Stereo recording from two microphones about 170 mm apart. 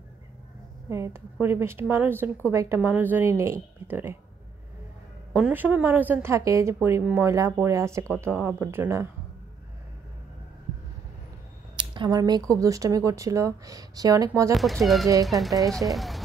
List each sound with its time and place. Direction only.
0.8 s a woman's voice: 15° right (ahead or behind)
5.3 s a woman's voice: 10° right (ahead or behind)
11.7 s speech: 25° right (ahead or behind)
14.5 s speech: centre (ahead or behind)